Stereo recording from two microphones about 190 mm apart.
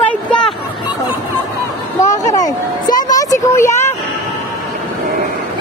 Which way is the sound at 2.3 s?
20° left (ahead or behind).